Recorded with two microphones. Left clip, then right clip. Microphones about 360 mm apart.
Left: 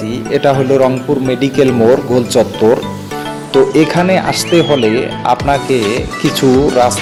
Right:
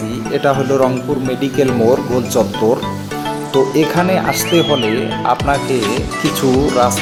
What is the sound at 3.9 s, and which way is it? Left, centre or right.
Speech, right.